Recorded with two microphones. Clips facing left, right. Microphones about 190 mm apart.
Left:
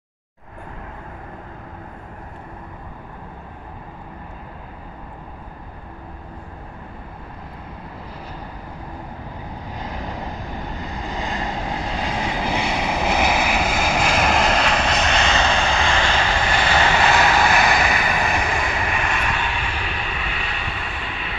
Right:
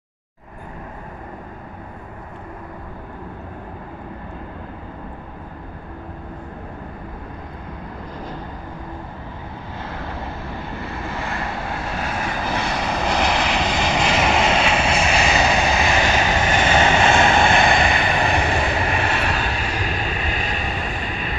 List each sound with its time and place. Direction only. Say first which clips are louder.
9.8 s vehicle: even; 15° left (ahead or behind); by 21.4 s 45° right (ahead or behind)